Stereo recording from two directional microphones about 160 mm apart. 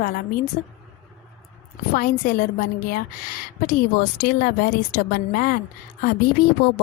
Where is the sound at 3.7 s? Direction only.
70° left (ahead or behind).